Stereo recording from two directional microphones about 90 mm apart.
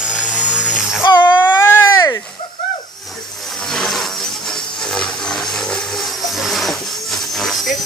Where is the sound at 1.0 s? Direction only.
55° left (ahead or behind).